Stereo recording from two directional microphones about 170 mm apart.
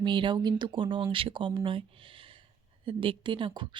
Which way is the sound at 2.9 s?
30° right (ahead or behind).